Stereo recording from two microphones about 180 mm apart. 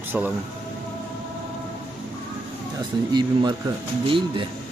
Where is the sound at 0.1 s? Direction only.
10° right (ahead or behind).